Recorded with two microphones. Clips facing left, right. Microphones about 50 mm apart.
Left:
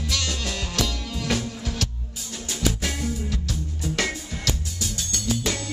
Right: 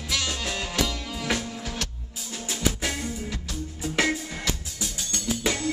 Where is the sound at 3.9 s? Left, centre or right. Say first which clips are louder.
Right 4 dB; centre.